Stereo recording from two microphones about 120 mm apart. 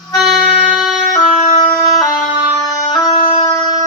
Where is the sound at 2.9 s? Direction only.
35° left (ahead or behind).